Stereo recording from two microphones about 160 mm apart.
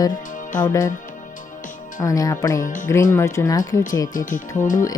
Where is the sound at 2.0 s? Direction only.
20° left (ahead or behind).